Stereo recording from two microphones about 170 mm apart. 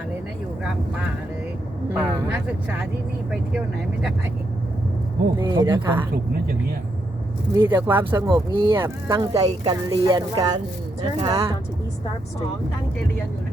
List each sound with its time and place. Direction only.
0.6 s speech: 5° right (ahead or behind)
5.4 s speech: 25° right (ahead or behind)
7.5 s speech: 20° right (ahead or behind)
8.1 s speech: 25° right (ahead or behind)